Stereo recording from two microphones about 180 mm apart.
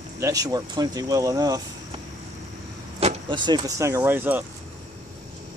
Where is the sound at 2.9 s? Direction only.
30° right (ahead or behind); by 4.4 s 10° right (ahead or behind).